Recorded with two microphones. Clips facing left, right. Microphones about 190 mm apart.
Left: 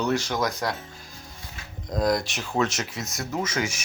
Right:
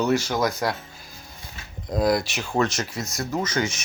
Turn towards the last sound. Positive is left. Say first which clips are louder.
# right 2 dB
turn(degrees=10)  # may be behind; listen again after turning